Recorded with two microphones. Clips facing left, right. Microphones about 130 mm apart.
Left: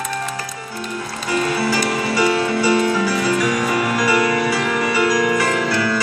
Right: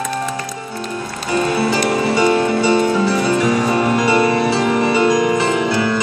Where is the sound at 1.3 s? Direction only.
25° right (ahead or behind).